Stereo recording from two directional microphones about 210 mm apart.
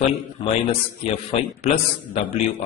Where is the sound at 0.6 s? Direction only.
25° left (ahead or behind).